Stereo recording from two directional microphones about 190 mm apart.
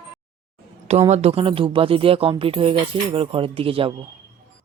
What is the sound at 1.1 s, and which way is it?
Speech, 30° right (ahead or behind).